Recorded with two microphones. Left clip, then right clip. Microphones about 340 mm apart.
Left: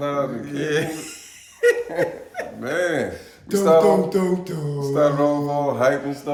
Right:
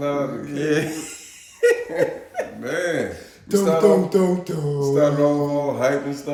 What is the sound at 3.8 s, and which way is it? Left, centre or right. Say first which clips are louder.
Music: right 2 dB; centre.